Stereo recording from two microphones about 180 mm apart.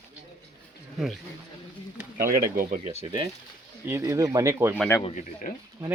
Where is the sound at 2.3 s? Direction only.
50° right (ahead or behind).